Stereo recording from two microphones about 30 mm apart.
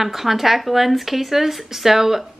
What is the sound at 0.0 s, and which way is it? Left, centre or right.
Speech, centre.